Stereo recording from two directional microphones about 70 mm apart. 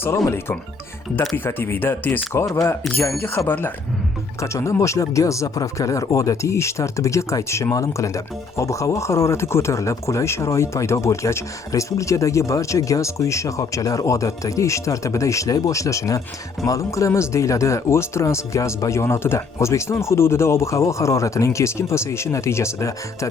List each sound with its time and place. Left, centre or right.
1.5 s speech: left
4.4 s speech: left